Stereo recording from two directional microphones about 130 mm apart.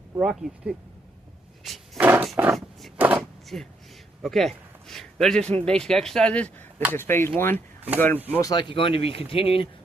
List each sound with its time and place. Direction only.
0.2 s speech: 5° right (ahead or behind)
2.0 s roaring cats: 15° right (ahead or behind)
3.0 s door: 15° right (ahead or behind)
3.5 s a man's voice: 5° left (ahead or behind)
8.4 s speech: 30° left (ahead or behind)